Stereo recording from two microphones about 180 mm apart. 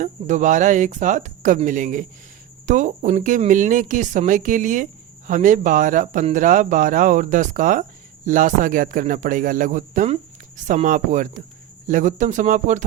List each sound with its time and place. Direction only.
0.0 s speech: 40° right (ahead or behind)